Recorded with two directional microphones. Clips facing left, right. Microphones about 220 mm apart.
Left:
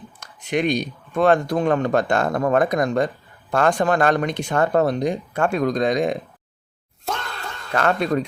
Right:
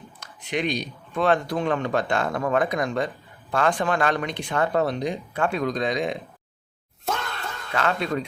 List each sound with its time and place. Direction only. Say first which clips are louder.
0.2 s speech: left 5 dB; 50° left (ahead or behind)
7.0 s a sound: even; centre (ahead or behind)
7.7 s speech: left 5 dB; 50° left (ahead or behind)